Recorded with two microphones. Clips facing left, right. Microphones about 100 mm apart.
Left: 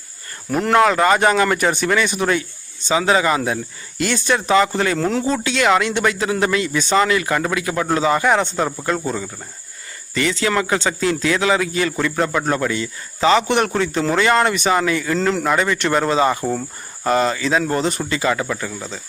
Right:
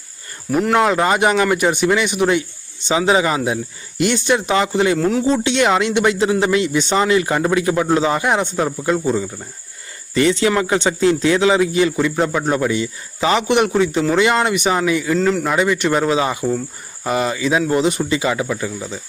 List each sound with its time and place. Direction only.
0.5 s speech: 5° right (ahead or behind)
1.0 s speech: 15° right (ahead or behind)
4.9 s speech: 5° right (ahead or behind)
5.2 s speech: 25° right (ahead or behind)
8.2 s speech: 15° right (ahead or behind)
10.2 s speech: 25° right (ahead or behind)